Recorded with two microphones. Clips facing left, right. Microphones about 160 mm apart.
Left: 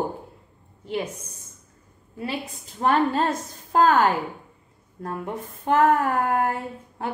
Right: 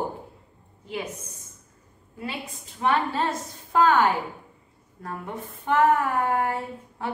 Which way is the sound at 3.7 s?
40° left (ahead or behind).